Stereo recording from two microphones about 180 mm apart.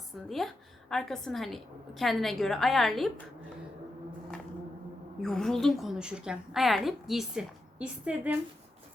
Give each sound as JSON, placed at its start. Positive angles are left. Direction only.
{"t": 0.3, "sound": "a woman's voice", "side_deg": 0}
{"t": 5.2, "sound": "a woman's voice", "side_deg": 0}